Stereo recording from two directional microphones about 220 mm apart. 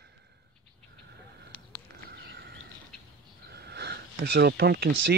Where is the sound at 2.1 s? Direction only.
50° right (ahead or behind).